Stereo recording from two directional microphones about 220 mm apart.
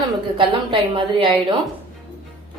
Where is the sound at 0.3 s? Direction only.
25° right (ahead or behind).